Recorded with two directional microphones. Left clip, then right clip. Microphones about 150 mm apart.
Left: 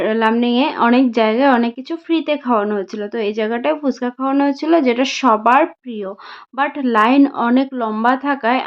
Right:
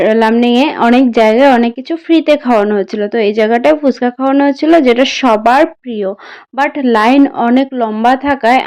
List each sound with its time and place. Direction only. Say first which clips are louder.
0.0 s a woman's voice: right 7 dB; 35° right (ahead or behind)